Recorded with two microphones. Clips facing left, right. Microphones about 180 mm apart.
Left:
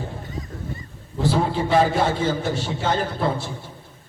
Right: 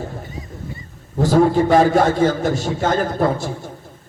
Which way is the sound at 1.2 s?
45° right (ahead or behind).